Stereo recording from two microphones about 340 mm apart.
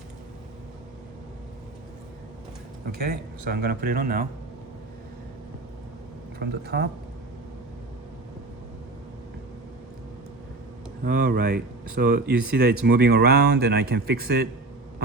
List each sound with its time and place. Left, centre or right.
3.0 s speech: right
6.4 s speech: right
11.0 s speech: right